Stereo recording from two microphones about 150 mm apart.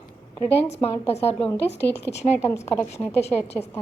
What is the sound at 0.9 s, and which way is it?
A woman's voice, 40° left (ahead or behind).